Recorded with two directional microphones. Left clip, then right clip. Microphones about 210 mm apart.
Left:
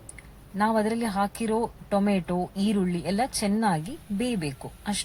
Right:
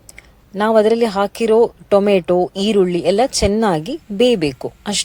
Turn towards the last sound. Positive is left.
turn(degrees=-40)  # may be behind; listen again after turning